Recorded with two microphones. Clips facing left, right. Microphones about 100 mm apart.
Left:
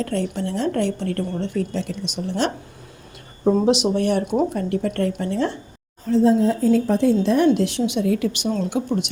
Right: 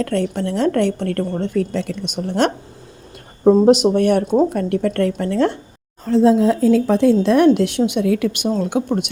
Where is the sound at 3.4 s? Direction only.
45° right (ahead or behind); by 5.5 s 60° right (ahead or behind).